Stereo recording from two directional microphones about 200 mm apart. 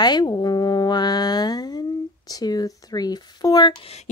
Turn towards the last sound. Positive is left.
turn(degrees=25)  # may be behind; listen again after turning